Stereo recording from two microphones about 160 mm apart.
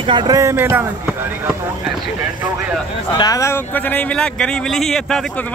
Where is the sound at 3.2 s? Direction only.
20° left (ahead or behind).